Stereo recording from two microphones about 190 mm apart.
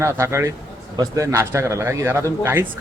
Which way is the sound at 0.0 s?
15° right (ahead or behind).